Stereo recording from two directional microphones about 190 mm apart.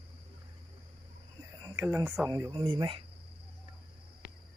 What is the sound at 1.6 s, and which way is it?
Speech, 20° right (ahead or behind).